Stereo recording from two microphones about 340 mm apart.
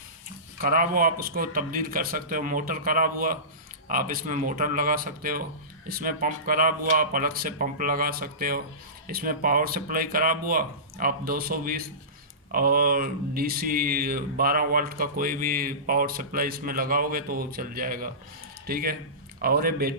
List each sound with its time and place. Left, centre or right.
0.6 s speech: right